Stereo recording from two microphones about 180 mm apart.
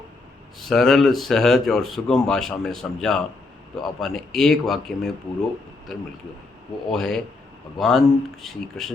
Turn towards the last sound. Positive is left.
turn(degrees=0)  # may be behind; listen again after turning